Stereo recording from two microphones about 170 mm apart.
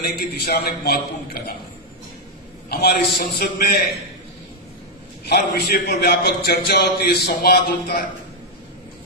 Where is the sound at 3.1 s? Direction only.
60° left (ahead or behind).